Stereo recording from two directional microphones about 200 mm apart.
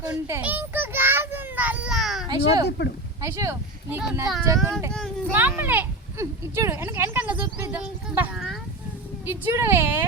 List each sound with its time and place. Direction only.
0.3 s child singing: 10° right (ahead or behind)
2.2 s speech: 20° right (ahead or behind)
2.6 s speech: 55° left (ahead or behind)
3.2 s speech: 15° right (ahead or behind)